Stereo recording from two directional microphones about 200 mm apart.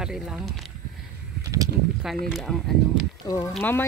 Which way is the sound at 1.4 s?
15° right (ahead or behind).